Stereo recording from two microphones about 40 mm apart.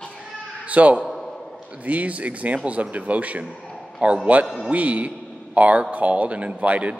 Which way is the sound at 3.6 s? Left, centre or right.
Centre.